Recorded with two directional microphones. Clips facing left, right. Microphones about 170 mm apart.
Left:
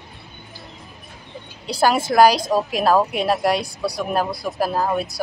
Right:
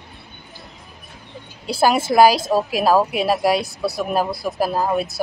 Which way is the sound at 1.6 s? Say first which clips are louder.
Right 1 dB; 10° right (ahead or behind).